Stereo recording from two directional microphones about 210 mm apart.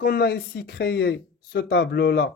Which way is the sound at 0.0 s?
45° left (ahead or behind).